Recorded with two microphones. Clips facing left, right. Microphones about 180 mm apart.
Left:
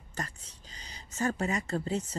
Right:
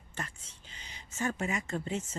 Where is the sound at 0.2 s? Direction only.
40° left (ahead or behind).